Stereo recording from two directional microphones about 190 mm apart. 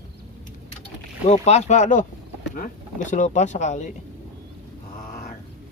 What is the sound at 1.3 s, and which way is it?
Speech, 35° left (ahead or behind).